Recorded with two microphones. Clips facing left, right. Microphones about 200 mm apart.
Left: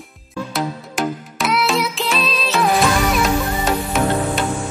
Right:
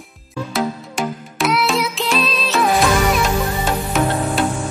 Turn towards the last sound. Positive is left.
turn(degrees=0)  # may be behind; listen again after turning